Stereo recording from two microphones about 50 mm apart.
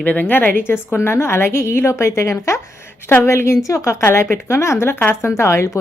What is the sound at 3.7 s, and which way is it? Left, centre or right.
Speech, left.